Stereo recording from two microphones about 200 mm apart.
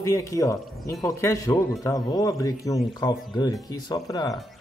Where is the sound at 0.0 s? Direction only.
15° left (ahead or behind).